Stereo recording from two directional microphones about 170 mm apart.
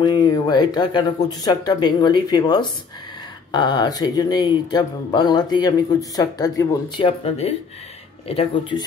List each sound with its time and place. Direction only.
0.0 s speech: 25° left (ahead or behind)
7.2 s speech: 35° left (ahead or behind)